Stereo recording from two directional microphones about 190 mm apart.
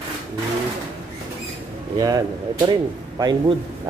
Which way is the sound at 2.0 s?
20° right (ahead or behind).